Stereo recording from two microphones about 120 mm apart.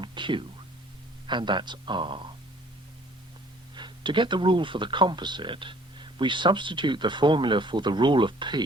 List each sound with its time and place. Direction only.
0.0 s music: 40° right (ahead or behind)
1.3 s speech: 40° right (ahead or behind)
3.8 s speech: 40° right (ahead or behind)